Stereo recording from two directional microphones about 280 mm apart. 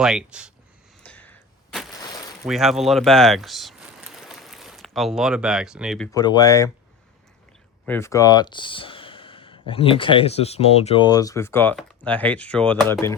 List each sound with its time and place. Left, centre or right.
0.0 s speech: centre
1.0 s a sound: centre
2.0 s a sound: centre
2.4 s speech: centre
6.1 s speech: centre
7.9 s speech: centre